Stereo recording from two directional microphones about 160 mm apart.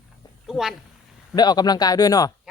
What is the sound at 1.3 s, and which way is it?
Speech, 25° left (ahead or behind).